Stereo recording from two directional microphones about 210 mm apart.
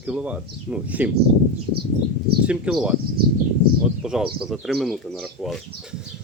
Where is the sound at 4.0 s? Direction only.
Centre (ahead or behind).